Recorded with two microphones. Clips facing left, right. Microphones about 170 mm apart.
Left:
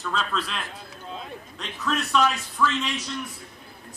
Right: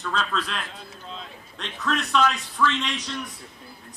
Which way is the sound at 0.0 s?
Centre (ahead or behind).